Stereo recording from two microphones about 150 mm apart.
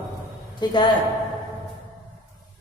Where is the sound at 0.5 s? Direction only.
30° left (ahead or behind).